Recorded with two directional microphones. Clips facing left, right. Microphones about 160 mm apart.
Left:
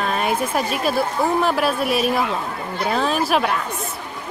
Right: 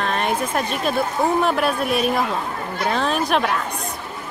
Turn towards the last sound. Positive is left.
turn(degrees=5)  # may be behind; listen again after turning